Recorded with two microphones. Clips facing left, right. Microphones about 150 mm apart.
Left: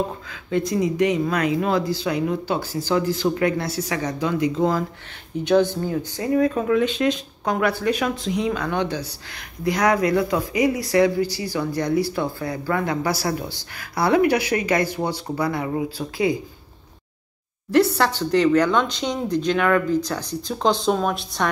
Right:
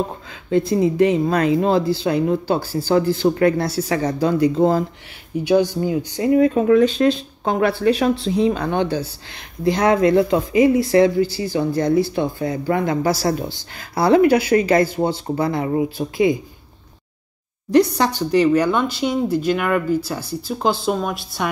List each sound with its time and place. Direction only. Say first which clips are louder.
0.3 s speech: right 7 dB; 30° right (ahead or behind)
5.4 s speech: right 1 dB; 10° right (ahead or behind)
5.9 s speech: right 5 dB; 20° right (ahead or behind)
6.4 s speech: right 6 dB; 40° right (ahead or behind)
17.6 s speech: right 2 dB; 15° right (ahead or behind)